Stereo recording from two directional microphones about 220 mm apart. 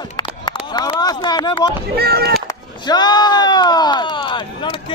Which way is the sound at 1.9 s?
45° right (ahead or behind).